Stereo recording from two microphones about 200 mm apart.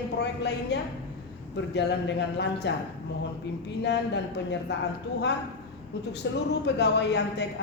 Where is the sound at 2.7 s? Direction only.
60° left (ahead or behind).